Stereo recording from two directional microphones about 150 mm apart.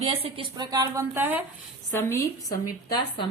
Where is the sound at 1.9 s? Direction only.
15° left (ahead or behind).